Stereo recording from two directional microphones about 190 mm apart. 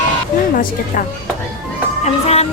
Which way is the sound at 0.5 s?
45° left (ahead or behind).